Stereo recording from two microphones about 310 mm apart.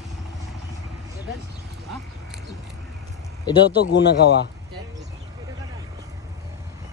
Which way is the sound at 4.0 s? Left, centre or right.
Left.